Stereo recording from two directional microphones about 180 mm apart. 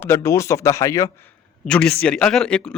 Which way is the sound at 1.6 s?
5° left (ahead or behind).